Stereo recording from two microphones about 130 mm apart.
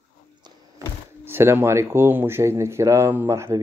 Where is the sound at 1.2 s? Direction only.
20° right (ahead or behind).